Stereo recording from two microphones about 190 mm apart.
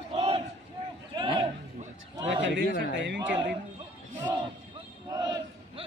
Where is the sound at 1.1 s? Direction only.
25° right (ahead or behind).